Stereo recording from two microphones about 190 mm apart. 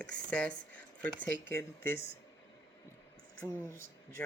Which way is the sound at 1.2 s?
10° left (ahead or behind).